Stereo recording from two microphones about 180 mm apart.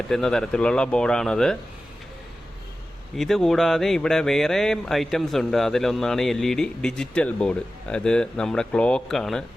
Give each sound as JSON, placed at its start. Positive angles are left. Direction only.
{"t": 0.1, "sound": "speech", "side_deg": 5}
{"t": 3.2, "sound": "speech", "side_deg": 0}